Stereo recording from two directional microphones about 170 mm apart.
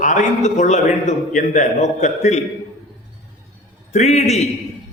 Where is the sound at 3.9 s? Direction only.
40° left (ahead or behind).